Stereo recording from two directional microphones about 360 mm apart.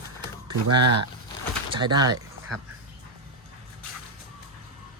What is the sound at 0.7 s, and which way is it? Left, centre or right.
Speech, right.